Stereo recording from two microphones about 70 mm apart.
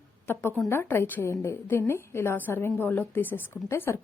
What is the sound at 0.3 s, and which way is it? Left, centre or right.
Speech, left.